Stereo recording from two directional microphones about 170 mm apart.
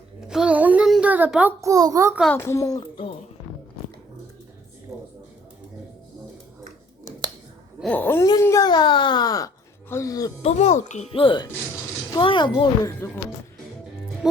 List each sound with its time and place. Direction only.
0.2 s a sound: 5° right (ahead or behind)
1.7 s a child's voice: 20° right (ahead or behind)
2.3 s speech: 15° left (ahead or behind); by 3.2 s 30° left (ahead or behind)
7.8 s wail: 10° left (ahead or behind)
8.3 s speech: 20° left (ahead or behind)
10.4 s a child's voice: 40° left (ahead or behind)